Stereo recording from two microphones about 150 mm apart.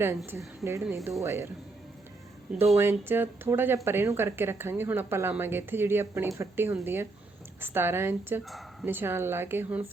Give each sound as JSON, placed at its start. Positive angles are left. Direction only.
{"t": 0.3, "sound": "a woman's voice", "side_deg": -20}
{"t": 2.5, "sound": "a woman's voice", "side_deg": -5}